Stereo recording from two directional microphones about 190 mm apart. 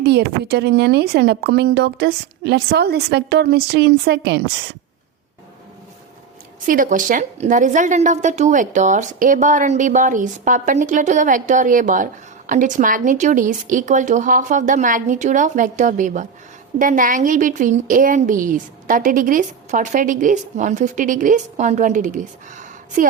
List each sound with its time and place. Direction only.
0.0 s speech: 60° right (ahead or behind)
6.7 s a woman's voice: 45° right (ahead or behind)